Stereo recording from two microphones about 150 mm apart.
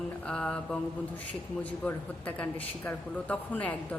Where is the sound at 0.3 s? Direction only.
10° left (ahead or behind).